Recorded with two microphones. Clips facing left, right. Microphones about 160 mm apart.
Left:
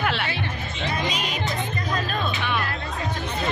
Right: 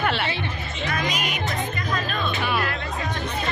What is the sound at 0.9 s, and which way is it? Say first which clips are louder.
Music: right 1 dB; 30° left (ahead or behind).